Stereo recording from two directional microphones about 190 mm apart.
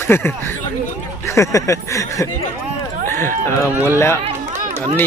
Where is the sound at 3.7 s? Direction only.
10° right (ahead or behind).